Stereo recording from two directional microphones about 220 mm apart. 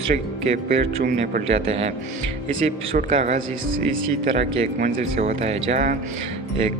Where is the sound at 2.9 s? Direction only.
30° right (ahead or behind).